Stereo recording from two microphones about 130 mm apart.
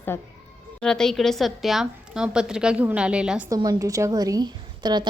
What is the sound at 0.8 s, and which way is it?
A woman's voice, 5° left (ahead or behind).